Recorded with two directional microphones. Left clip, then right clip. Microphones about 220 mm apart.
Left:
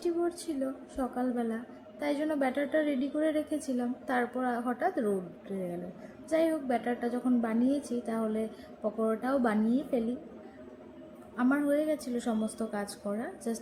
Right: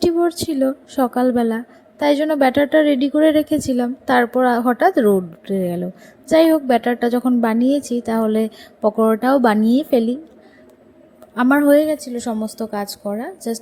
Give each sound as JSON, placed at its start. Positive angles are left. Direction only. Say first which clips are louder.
{"t": 0.0, "sound": "a woman's voice", "louder": "right 14 dB", "side_deg": -45}
{"t": 11.3, "sound": "a woman's voice", "louder": "right 15 dB", "side_deg": -45}